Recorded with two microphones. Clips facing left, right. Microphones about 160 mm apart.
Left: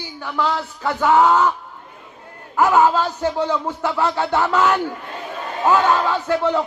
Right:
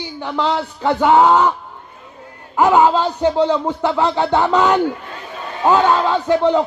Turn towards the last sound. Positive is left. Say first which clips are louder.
# right 4 dB
turn(degrees=-15)  # may be behind; listen again after turning